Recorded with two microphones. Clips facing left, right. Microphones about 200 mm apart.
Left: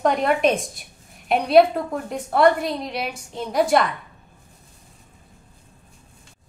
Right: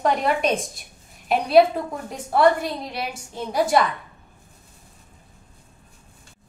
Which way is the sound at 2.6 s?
Centre (ahead or behind).